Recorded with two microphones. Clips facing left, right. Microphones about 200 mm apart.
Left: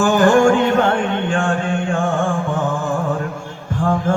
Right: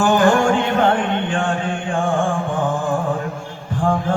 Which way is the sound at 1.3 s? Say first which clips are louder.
Left 2 dB; 45° left (ahead or behind).